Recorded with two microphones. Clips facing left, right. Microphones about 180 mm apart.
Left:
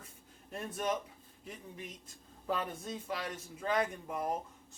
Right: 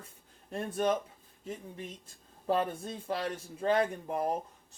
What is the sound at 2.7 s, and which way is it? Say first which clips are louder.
Speech: right 4 dB; 30° right (ahead or behind).